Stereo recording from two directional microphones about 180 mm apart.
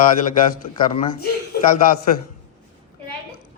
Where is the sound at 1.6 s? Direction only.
50° left (ahead or behind).